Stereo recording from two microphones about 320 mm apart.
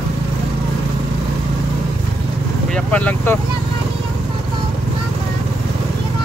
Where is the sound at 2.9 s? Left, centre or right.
Centre.